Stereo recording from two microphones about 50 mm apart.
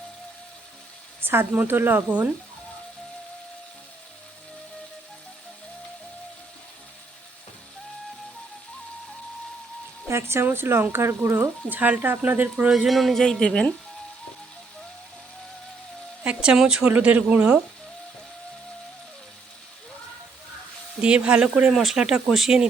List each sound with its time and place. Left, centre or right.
1.2 s a sound: right
1.5 s speech: right
2.0 s speech: right
10.1 s speech: right
10.4 s speech: right
11.3 s speech: right
12.7 s speech: centre
13.2 s speech: centre
16.2 s speech: right
16.8 s speech: right
21.0 s speech: right
21.7 s speech: centre
21.9 s speech: centre